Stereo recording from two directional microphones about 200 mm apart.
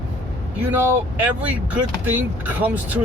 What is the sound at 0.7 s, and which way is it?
Speech, 10° right (ahead or behind).